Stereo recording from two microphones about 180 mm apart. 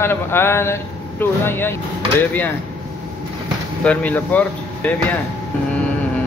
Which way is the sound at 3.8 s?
10° left (ahead or behind).